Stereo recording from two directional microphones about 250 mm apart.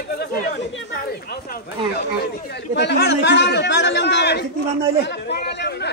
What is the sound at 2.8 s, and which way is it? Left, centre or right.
A man's voice, left.